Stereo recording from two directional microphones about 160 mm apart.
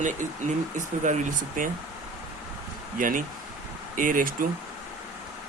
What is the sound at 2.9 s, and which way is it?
Speech, 60° right (ahead or behind).